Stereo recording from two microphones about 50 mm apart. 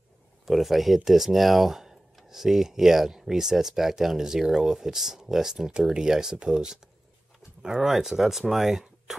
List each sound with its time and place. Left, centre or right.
0.5 s speech: centre